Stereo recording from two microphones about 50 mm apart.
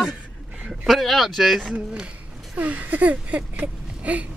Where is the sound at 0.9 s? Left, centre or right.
Centre.